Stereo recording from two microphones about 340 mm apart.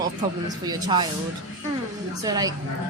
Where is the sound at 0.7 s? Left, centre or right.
Centre.